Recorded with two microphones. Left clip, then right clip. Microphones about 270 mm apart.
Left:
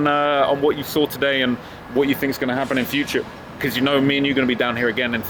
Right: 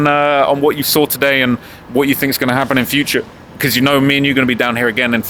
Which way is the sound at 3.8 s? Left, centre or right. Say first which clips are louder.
Right 5 dB; right.